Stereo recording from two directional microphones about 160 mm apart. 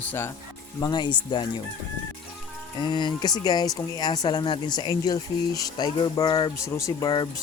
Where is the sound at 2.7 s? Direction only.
30° left (ahead or behind).